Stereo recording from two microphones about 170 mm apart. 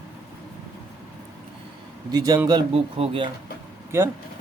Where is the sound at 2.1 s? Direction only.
20° right (ahead or behind).